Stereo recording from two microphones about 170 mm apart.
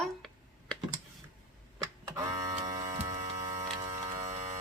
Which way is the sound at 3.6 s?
20° right (ahead or behind).